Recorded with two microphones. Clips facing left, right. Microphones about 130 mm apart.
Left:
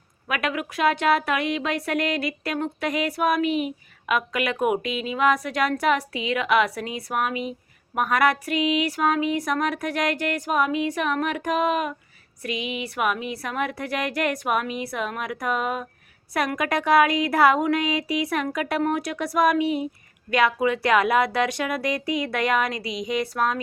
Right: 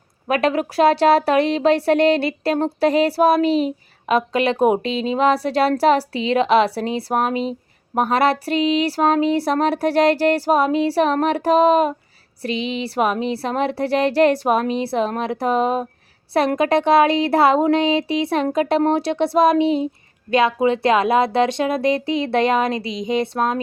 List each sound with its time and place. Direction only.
0.3 s speech: 35° right (ahead or behind)